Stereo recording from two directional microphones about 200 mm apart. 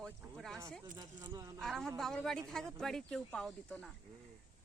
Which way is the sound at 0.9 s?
20° right (ahead or behind).